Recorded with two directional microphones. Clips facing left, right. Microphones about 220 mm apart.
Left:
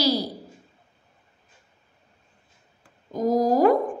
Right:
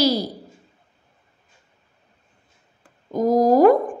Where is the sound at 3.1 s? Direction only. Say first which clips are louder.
Right 4 dB; 55° right (ahead or behind).